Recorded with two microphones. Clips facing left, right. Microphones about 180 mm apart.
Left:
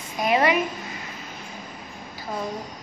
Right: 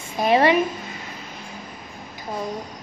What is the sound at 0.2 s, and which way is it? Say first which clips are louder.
Speech: right 4 dB; 30° right (ahead or behind).